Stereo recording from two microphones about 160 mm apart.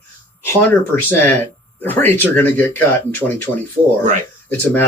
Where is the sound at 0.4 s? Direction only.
15° left (ahead or behind).